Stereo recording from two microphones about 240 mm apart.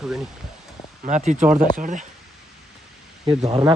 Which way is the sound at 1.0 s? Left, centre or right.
Right.